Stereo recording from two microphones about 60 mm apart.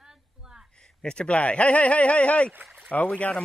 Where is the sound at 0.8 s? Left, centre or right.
Centre.